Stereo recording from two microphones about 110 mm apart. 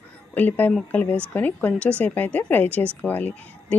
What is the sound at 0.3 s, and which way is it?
A woman's voice, 15° left (ahead or behind).